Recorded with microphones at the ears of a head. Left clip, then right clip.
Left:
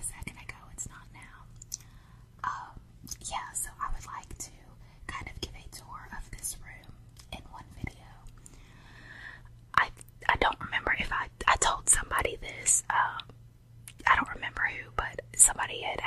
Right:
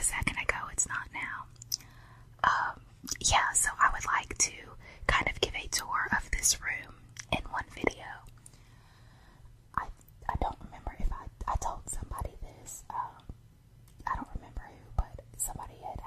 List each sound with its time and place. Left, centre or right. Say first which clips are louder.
0.0 s whispering: right 13 dB; right
9.0 s whispering: left 15 dB; left